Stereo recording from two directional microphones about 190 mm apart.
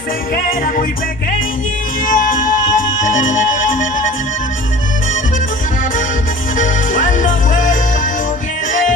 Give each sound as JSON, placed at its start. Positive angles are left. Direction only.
{"t": 0.3, "sound": "music", "side_deg": 50}
{"t": 2.0, "sound": "music", "side_deg": 45}
{"t": 6.5, "sound": "music", "side_deg": 45}